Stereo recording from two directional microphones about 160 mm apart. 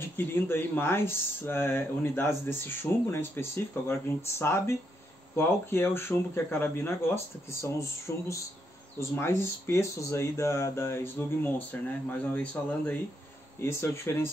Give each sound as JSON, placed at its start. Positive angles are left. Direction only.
{"t": 0.2, "sound": "speech", "side_deg": 15}